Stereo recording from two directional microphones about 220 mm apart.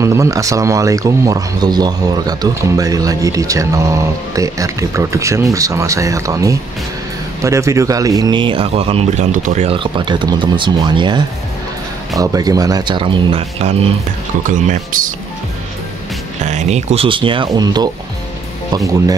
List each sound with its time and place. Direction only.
0.0 s speech: 15° right (ahead or behind)
14.7 s speech: 35° right (ahead or behind)
16.4 s speech: 30° right (ahead or behind)